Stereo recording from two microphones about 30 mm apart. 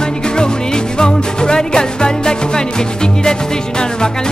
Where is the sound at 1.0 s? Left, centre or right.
Left.